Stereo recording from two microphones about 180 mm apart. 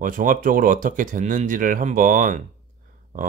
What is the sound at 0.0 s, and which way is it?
Speech, 50° right (ahead or behind).